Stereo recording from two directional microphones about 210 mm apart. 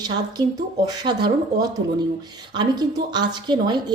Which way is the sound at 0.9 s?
20° right (ahead or behind).